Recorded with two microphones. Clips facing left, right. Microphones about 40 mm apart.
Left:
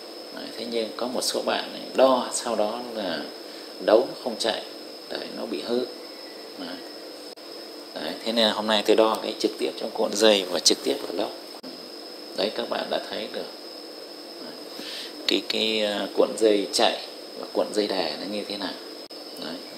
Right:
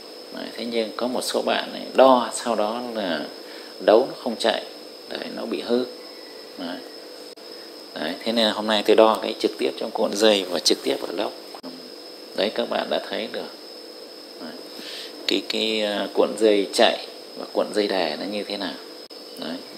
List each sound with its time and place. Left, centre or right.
0.4 s speech: right
7.9 s speech: right
8.4 s speech: centre
8.9 s speech: right
10.1 s speech: centre
11.2 s speech: right
12.4 s speech: right
15.2 s speech: centre
16.3 s speech: right